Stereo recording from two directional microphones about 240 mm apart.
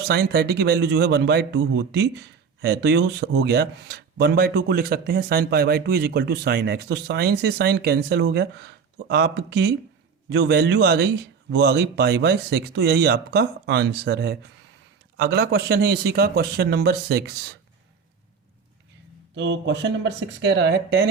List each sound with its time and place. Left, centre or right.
0.1 s a man's voice: right
19.4 s a man's voice: right